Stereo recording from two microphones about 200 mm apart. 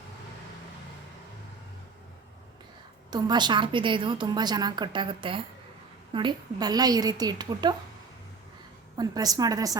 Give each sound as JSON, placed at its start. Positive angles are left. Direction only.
{"t": 3.1, "sound": "a woman's voice", "side_deg": -20}
{"t": 9.0, "sound": "a woman's voice", "side_deg": -20}